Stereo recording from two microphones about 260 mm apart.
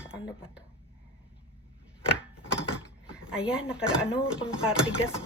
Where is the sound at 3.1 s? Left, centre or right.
Centre.